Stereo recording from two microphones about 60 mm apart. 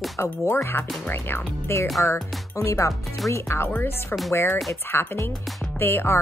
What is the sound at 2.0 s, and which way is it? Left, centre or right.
Speech, left.